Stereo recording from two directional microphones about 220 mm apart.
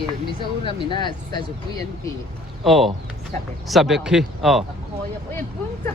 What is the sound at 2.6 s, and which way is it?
Speech, centre (ahead or behind).